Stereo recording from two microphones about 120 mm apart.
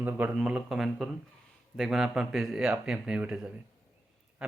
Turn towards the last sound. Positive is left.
turn(degrees=-5)  # may be behind; listen again after turning